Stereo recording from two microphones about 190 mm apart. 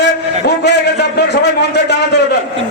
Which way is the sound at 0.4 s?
60° left (ahead or behind).